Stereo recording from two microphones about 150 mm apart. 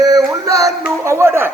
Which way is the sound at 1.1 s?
15° right (ahead or behind).